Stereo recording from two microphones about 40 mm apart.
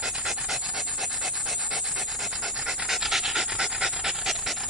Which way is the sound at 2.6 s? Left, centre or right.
Centre.